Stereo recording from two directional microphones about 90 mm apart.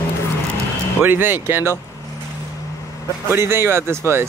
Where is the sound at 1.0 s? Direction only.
25° right (ahead or behind).